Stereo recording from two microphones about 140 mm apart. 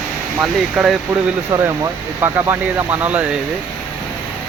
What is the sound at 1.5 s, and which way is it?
Speech, 20° right (ahead or behind).